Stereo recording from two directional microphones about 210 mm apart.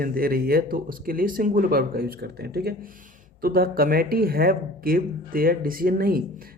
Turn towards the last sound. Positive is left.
turn(degrees=-45)  # may be behind; listen again after turning